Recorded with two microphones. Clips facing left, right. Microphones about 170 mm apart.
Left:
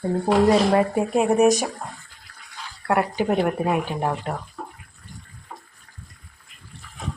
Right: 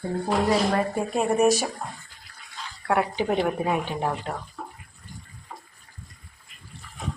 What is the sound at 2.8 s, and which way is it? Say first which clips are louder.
Speech: left 2 dB; 5° left (ahead or behind).